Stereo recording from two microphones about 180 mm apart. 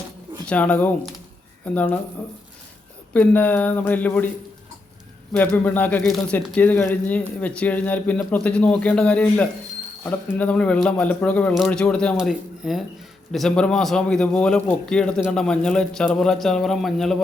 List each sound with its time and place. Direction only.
0.4 s speech: 5° left (ahead or behind)
3.1 s speech: 10° left (ahead or behind)
5.3 s a man's voice: 10° left (ahead or behind)